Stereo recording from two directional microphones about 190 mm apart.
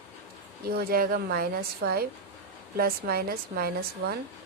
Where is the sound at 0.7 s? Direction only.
50° right (ahead or behind).